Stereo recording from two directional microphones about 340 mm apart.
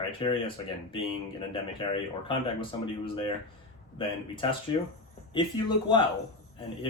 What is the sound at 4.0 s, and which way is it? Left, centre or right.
Speech, centre.